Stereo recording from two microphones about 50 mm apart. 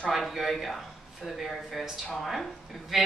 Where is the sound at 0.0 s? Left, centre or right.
Centre.